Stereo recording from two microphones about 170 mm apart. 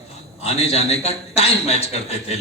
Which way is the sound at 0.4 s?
40° left (ahead or behind).